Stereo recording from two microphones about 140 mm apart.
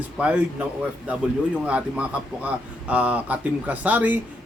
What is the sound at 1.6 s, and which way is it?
Speech, 10° right (ahead or behind).